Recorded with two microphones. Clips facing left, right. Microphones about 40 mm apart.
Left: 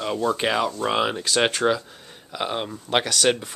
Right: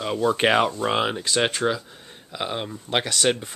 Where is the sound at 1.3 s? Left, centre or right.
Centre.